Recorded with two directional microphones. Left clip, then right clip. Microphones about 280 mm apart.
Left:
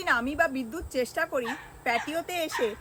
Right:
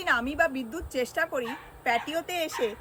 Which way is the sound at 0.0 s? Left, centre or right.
Centre.